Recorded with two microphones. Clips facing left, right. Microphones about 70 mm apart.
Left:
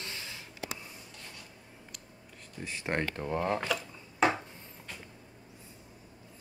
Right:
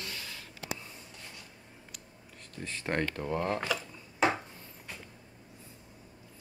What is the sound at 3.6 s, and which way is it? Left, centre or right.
Wood, centre.